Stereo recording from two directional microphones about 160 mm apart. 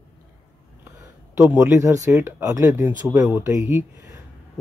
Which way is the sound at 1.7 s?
20° right (ahead or behind).